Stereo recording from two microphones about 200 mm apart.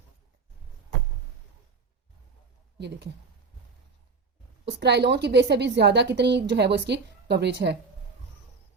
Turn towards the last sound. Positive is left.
turn(degrees=-60)  # may be behind; listen again after turning